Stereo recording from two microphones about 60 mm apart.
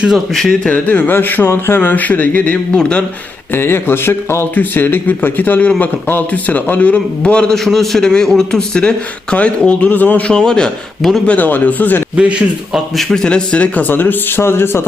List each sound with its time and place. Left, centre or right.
0.7 s speech: left
3.5 s speech: left; by 7.5 s centre
7.5 s a man's voice: centre; by 10.3 s left
10.3 s a man's voice: centre
11.3 s speech: left
12.1 s a man's voice: right
12.7 s a man's voice: centre
13.2 s speech: centre; by 14.8 s left